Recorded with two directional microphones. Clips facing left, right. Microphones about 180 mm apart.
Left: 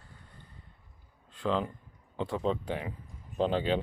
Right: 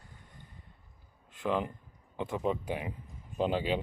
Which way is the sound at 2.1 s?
15° right (ahead or behind).